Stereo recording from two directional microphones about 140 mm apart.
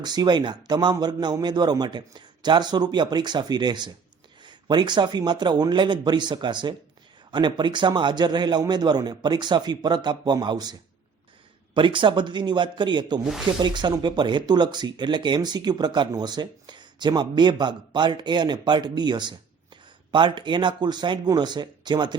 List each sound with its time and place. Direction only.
0.0 s speech: 30° right (ahead or behind)